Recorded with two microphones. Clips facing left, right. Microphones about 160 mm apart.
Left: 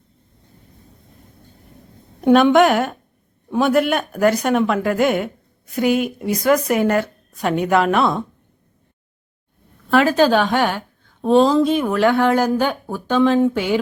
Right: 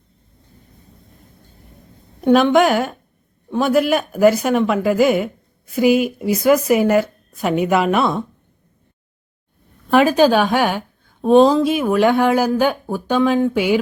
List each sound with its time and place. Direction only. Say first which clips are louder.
2.2 s speech: left 1 dB; centre (ahead or behind)
9.9 s a woman's voice: right 2 dB; 15° right (ahead or behind)